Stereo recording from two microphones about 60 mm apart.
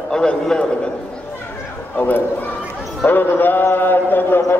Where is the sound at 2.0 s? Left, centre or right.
Left.